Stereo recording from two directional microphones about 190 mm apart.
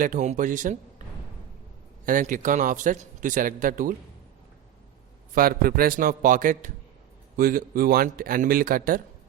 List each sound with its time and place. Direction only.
0.0 s a man's voice: 40° right (ahead or behind)
2.0 s a man's voice: 45° right (ahead or behind)
5.3 s a man's voice: 50° right (ahead or behind)